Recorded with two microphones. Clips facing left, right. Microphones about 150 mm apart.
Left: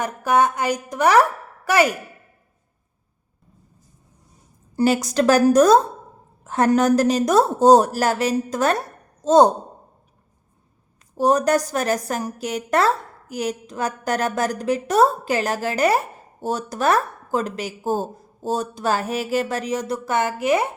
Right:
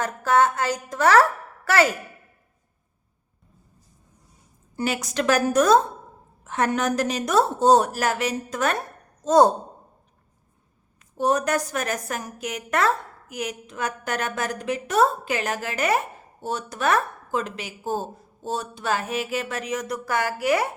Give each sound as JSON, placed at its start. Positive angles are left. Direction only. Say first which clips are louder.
{"t": 0.0, "sound": "a woman's voice", "louder": "left 1 dB", "side_deg": 15}
{"t": 4.8, "sound": "a woman's voice", "louder": "left 7 dB", "side_deg": 35}
{"t": 9.2, "sound": "speech", "louder": "left 3 dB", "side_deg": 25}
{"t": 11.2, "sound": "a woman's voice", "louder": "left 5 dB", "side_deg": 35}